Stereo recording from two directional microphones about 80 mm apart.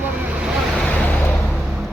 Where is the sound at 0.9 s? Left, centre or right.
Centre.